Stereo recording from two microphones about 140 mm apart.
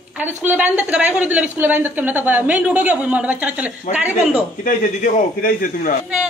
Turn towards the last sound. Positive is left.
turn(degrees=80)